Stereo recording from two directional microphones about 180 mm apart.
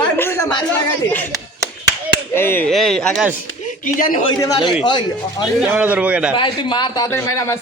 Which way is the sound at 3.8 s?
50° left (ahead or behind).